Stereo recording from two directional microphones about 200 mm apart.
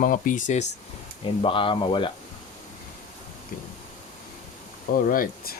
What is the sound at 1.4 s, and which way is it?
Speech, 25° left (ahead or behind).